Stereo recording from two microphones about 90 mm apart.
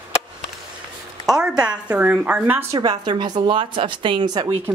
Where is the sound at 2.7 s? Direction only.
50° right (ahead or behind).